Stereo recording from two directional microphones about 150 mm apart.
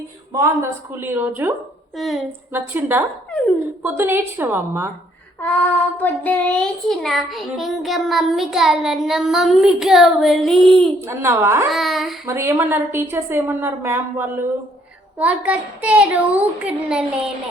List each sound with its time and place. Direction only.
0.3 s a woman's voice: 20° right (ahead or behind)
2.0 s child singing: centre (ahead or behind)
2.5 s a woman's voice: 15° right (ahead or behind)
5.4 s child singing: 10° left (ahead or behind)
11.0 s a woman's voice: 20° right (ahead or behind)
11.7 s child singing: centre (ahead or behind)
12.2 s a woman's voice: 20° right (ahead or behind)